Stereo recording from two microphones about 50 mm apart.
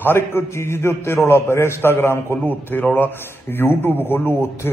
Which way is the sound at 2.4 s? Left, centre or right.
Left.